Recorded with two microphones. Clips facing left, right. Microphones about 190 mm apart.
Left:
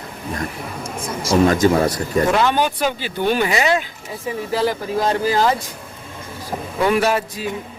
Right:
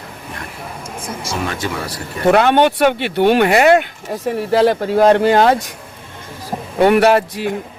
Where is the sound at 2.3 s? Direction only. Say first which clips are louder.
Right 11 dB; 60° right (ahead or behind).